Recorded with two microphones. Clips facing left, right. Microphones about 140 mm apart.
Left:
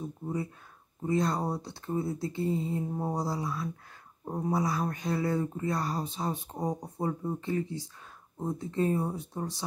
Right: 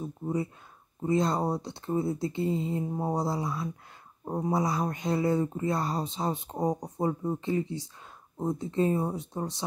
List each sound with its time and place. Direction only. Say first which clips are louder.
1.0 s speech: right 2 dB; 20° right (ahead or behind)